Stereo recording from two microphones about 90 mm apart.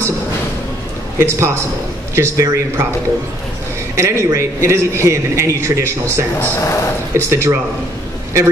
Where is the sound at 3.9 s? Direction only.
35° right (ahead or behind).